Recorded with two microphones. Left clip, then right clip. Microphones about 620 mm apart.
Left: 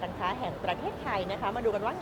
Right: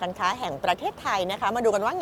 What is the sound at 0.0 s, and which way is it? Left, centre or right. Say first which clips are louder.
A woman's voice: right 6 dB; right.